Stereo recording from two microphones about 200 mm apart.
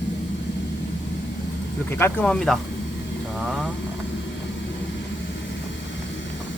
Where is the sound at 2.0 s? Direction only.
5° left (ahead or behind).